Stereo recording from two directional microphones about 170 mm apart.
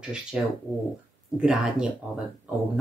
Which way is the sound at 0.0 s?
5° right (ahead or behind).